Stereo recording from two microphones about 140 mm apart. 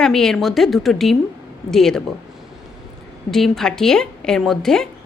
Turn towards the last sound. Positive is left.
turn(degrees=5)  # may be behind; listen again after turning